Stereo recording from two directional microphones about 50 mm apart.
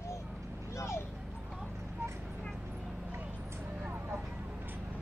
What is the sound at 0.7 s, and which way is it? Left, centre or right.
Vehicle, left.